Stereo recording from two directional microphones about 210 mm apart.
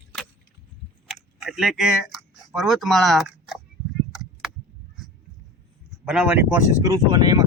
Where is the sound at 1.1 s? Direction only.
Centre (ahead or behind).